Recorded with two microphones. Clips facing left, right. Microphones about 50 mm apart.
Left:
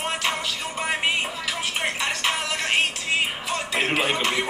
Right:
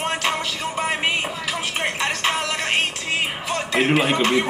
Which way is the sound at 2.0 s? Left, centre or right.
Right.